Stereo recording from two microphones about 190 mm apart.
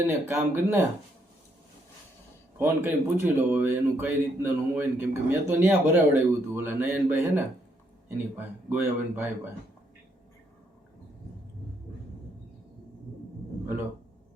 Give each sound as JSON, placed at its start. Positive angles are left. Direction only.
{"t": 0.3, "sound": "speech", "side_deg": -10}
{"t": 2.6, "sound": "speech", "side_deg": -15}